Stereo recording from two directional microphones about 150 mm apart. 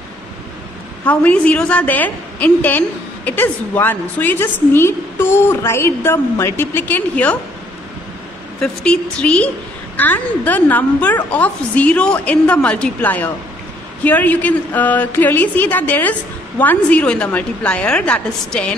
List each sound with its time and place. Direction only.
1.0 s a woman's voice: 10° left (ahead or behind)
8.5 s a woman's voice: 5° left (ahead or behind)